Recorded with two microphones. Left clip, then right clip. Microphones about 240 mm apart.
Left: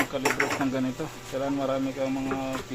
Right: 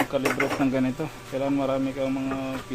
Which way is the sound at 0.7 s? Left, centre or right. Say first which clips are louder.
Right 3 dB; right.